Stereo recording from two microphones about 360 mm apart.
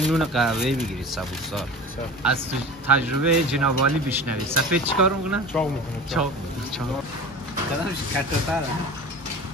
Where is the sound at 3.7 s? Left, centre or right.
Right.